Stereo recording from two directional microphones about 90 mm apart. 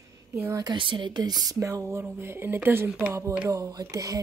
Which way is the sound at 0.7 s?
65° right (ahead or behind).